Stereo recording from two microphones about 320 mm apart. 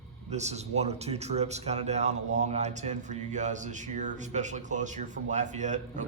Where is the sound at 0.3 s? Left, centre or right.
Right.